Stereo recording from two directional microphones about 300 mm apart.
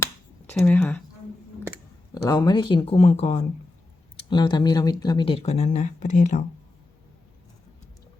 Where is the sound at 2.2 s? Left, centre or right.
Centre.